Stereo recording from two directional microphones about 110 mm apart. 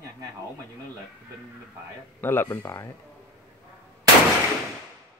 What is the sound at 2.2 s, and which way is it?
Speech, 20° left (ahead or behind).